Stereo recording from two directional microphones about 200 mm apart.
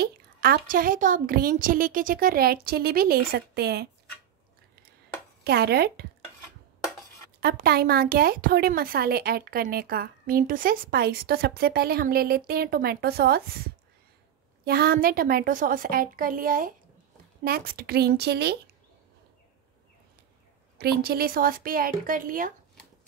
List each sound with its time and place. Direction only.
0.0 s speech: 50° right (ahead or behind)
5.4 s speech: 55° right (ahead or behind)
7.3 s speech: 50° right (ahead or behind)
14.6 s speech: 50° right (ahead or behind)
20.7 s speech: 50° right (ahead or behind)